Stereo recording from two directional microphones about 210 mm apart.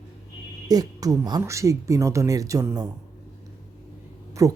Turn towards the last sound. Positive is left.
turn(degrees=-15)  # may be behind; listen again after turning